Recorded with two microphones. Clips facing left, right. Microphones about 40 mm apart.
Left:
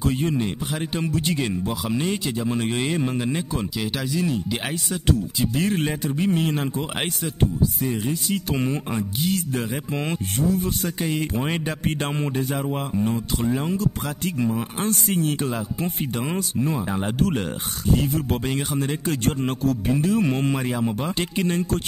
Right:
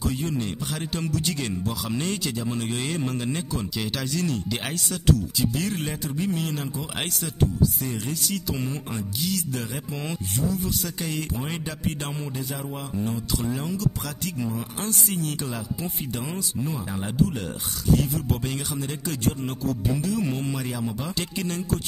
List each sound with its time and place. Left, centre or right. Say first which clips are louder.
0.0 s speech: left 4 dB; left; by 4.6 s centre
5.1 s speech: left 1 dB; left
7.8 s speech: left 5 dB; centre
8.5 s speech: left 5 dB; left
11.0 s speech: left 5 dB; left
11.3 s speech: left 6 dB; left
13.1 s speech: left 4 dB; left